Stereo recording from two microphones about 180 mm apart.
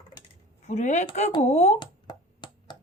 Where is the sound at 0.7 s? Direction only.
40° left (ahead or behind).